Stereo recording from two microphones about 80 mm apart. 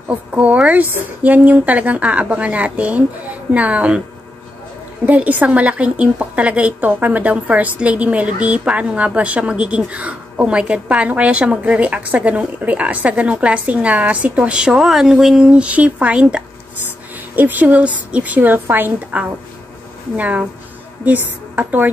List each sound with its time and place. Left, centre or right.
0.1 s a woman's voice: centre
5.0 s a woman's voice: centre